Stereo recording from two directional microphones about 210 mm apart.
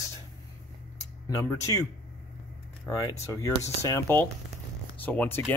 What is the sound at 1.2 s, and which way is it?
Speech, 15° left (ahead or behind).